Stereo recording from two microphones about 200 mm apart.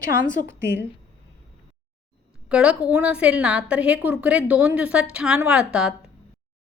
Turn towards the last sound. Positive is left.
turn(degrees=-5)  # may be behind; listen again after turning